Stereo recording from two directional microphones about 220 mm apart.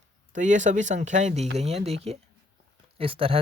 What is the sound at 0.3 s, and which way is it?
Speech, 35° right (ahead or behind).